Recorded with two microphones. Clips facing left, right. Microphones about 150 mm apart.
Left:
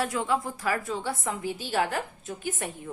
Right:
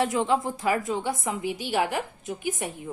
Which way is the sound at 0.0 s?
20° right (ahead or behind).